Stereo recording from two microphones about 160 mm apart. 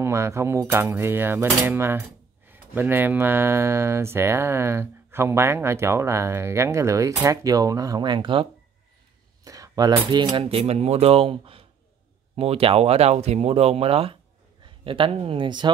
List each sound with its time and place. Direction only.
0.0 s coin: 15° right (ahead or behind); by 8.5 s 30° right (ahead or behind)
9.4 s a sound: 20° right (ahead or behind)
10.1 s speech: 30° right (ahead or behind)